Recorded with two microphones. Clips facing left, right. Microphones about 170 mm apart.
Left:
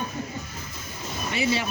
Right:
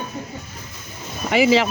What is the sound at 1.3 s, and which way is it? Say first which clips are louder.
Speech: right 10 dB; 90° right.